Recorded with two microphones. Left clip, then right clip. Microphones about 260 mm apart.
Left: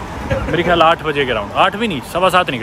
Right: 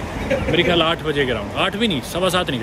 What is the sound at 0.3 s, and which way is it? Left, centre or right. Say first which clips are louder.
Speech: left 2 dB; centre.